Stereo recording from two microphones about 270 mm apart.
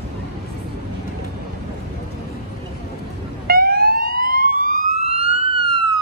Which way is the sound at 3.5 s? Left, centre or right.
Right.